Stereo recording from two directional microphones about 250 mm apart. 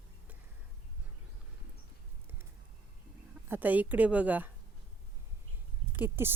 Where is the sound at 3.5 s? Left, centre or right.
Centre.